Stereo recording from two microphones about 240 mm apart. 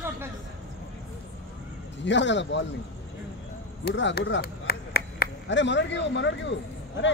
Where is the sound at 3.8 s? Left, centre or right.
Left.